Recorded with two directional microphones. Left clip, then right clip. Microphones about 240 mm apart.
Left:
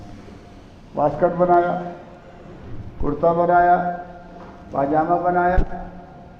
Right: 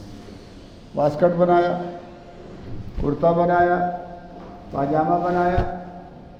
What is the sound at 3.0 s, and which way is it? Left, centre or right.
A man's voice, right.